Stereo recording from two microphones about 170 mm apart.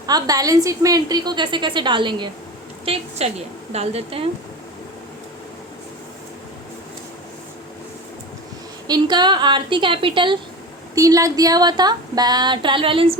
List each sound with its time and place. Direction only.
0.0 s a woman's voice: 20° right (ahead or behind)
8.9 s a woman's voice: 25° right (ahead or behind)
10.9 s a woman's voice: 20° right (ahead or behind)